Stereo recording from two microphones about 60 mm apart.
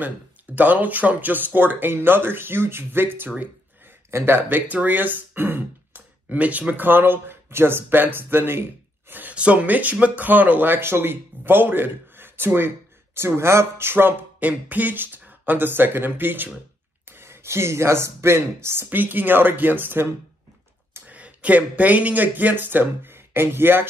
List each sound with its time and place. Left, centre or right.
0.6 s speech: right
9.3 s speech: right
14.4 s speech: right
18.9 s speech: right
21.1 s speech: right